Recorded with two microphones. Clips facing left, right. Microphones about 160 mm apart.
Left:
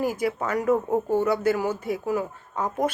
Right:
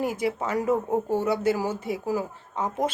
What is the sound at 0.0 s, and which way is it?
Speech, 25° right (ahead or behind).